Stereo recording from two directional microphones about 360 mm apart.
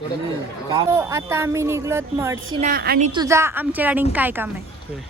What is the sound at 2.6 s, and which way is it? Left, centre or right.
A woman's voice, right.